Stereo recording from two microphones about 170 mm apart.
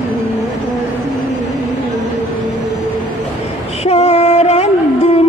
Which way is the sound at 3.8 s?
40° left (ahead or behind).